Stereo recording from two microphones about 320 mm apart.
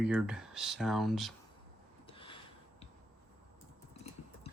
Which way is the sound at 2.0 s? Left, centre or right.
Centre.